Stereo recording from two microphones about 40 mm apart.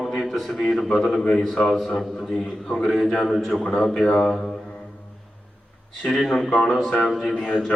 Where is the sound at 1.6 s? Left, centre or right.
Centre.